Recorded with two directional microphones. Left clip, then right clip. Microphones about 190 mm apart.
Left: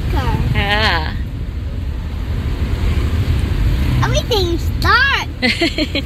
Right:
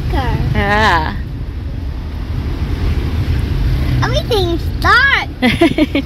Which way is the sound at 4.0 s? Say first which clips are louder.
Right 2 dB; 30° right (ahead or behind).